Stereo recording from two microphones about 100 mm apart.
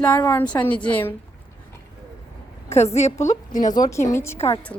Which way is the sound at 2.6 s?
90° left.